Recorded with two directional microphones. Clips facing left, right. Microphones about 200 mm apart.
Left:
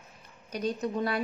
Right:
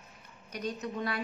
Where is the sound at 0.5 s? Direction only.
35° left (ahead or behind).